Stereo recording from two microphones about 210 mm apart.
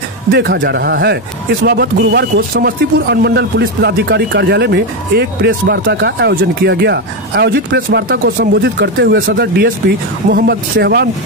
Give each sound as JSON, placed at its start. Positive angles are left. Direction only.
{"t": 0.4, "sound": "speech", "side_deg": -55}